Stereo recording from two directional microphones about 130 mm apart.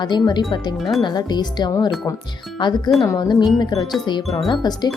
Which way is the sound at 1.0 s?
35° left (ahead or behind).